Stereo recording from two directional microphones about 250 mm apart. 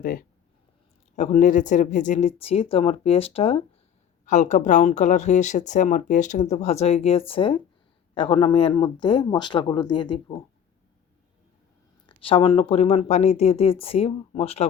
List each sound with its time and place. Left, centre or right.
0.0 s speech: left; by 10.4 s centre
12.0 s speech: left